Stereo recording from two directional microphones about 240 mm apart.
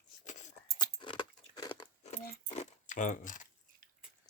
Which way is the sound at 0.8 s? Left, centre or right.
Centre.